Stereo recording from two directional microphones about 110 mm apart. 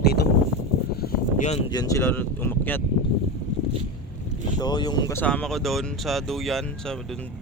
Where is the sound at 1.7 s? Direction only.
35° left (ahead or behind).